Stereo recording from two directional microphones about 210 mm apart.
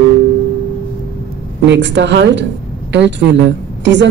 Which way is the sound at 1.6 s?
60° right (ahead or behind).